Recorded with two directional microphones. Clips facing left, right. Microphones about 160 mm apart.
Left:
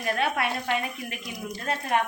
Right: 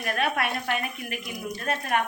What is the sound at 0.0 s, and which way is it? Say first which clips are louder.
Speech: even; 25° left (ahead or behind).